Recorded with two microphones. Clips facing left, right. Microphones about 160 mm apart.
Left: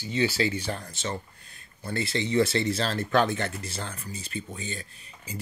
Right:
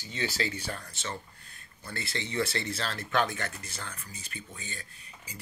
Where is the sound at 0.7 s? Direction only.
25° left (ahead or behind).